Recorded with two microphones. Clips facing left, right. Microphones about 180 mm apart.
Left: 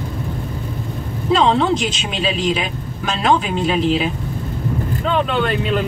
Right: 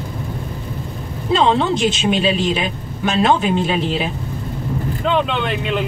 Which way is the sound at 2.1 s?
35° right (ahead or behind).